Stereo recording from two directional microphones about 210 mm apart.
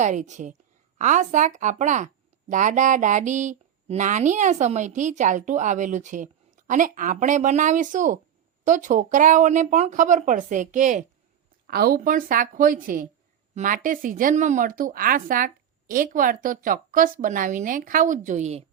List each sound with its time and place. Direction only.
0.0 s speech: 35° right (ahead or behind)